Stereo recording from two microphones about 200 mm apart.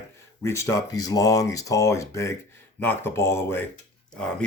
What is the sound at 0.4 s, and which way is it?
Speech, 15° left (ahead or behind).